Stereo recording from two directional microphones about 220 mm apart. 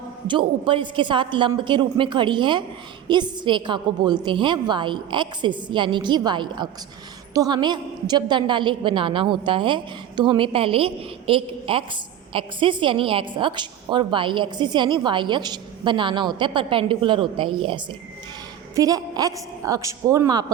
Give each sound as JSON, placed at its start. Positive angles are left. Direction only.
{"t": 0.3, "sound": "a woman's voice", "side_deg": -20}
{"t": 18.8, "sound": "a woman's voice", "side_deg": -15}